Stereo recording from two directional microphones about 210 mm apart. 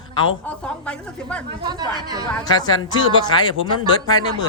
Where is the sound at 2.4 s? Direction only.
20° left (ahead or behind).